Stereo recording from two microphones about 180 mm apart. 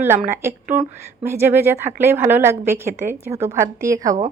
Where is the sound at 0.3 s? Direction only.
10° right (ahead or behind).